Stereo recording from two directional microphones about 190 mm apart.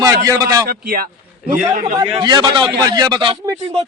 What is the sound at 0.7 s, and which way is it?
Speech, 50° right (ahead or behind).